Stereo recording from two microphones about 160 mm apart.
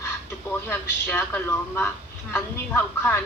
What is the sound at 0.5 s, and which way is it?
A woman's voice, 15° left (ahead or behind).